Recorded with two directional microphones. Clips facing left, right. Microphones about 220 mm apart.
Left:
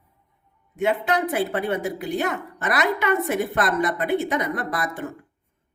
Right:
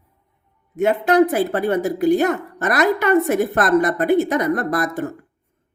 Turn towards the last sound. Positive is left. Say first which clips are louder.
# right 7 dB
turn(degrees=-40)  # may be behind; listen again after turning